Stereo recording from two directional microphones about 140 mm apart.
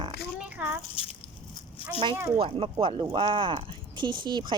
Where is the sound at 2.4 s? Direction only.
40° right (ahead or behind).